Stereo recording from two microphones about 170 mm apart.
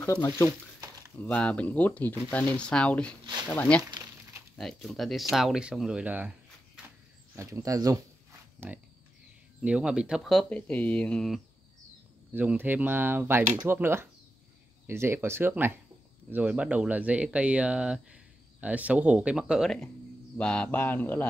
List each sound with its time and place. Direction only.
0.0 s speech: 15° left (ahead or behind)
0.5 s a sound: 20° right (ahead or behind)
1.2 s speech: 5° left (ahead or behind)
3.9 s crumpling: 20° right (ahead or behind)
4.6 s speech: centre (ahead or behind); by 8.0 s 20° right (ahead or behind)
8.6 s speech: 5° right (ahead or behind)
12.4 s speech: 10° right (ahead or behind); by 21.3 s 10° left (ahead or behind)